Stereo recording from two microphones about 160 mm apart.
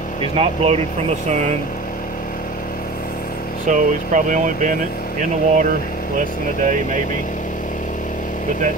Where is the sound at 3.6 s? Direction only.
50° right (ahead or behind).